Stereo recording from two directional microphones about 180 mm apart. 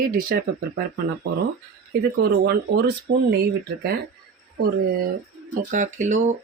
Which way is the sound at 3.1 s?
60° right (ahead or behind).